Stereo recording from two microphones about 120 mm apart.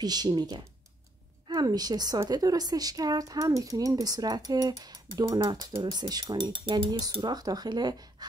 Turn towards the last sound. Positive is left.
turn(degrees=-35)  # may be behind; listen again after turning